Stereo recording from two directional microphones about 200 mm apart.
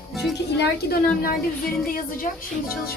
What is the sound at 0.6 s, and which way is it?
A woman's voice, 50° left (ahead or behind).